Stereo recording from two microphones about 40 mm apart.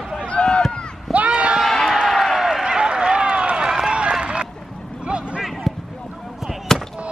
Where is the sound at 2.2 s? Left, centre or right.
Centre.